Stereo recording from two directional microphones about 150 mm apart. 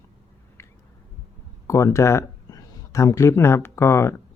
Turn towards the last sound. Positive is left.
turn(degrees=15)  # may be behind; listen again after turning